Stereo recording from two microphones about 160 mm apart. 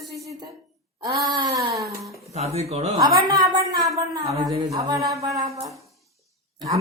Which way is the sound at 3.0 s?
25° right (ahead or behind).